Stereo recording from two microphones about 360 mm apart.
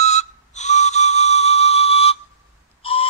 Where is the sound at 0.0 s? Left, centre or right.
Centre.